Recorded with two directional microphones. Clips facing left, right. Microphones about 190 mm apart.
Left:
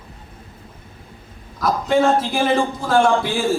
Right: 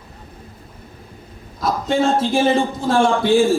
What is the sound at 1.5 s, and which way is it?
A man's voice, 25° right (ahead or behind).